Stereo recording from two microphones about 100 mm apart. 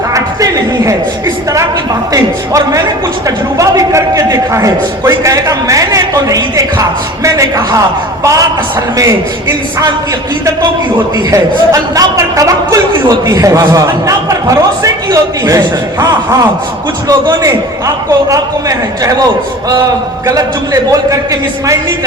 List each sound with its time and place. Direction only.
0.1 s a sound: 35° right (ahead or behind)
2.1 s a man's voice: 35° right (ahead or behind)
11.3 s a man's voice: 35° right (ahead or behind)